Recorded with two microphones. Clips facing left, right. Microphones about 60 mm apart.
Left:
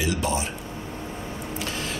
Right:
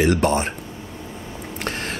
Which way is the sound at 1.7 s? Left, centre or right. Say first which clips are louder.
Right 7 dB; right.